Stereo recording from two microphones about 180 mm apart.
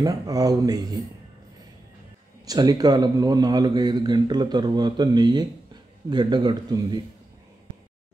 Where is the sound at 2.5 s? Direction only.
20° right (ahead or behind).